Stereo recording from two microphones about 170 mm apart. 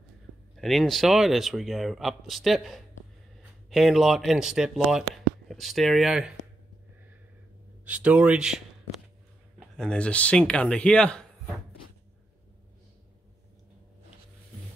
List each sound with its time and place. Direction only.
0.6 s speech: centre (ahead or behind)
7.8 s a man's voice: 10° right (ahead or behind)
9.8 s a man's voice: 5° left (ahead or behind)